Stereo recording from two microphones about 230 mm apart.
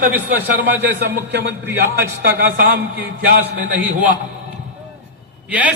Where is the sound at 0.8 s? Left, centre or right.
Right.